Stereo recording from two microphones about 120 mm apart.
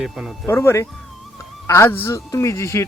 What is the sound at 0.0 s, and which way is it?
Speech, centre (ahead or behind).